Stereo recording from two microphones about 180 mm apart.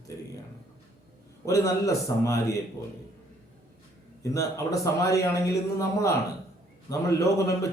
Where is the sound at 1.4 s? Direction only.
20° left (ahead or behind).